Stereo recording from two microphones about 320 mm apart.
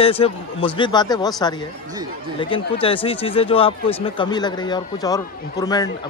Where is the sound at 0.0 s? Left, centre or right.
Centre.